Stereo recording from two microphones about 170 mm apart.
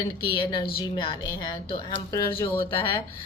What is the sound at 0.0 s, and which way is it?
A woman's voice, 30° left (ahead or behind).